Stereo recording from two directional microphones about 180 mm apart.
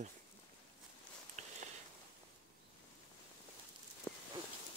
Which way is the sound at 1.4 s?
40° right (ahead or behind).